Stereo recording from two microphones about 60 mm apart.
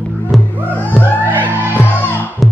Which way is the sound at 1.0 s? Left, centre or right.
Right.